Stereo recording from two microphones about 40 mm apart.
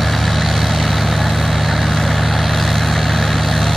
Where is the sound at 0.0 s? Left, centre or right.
Centre.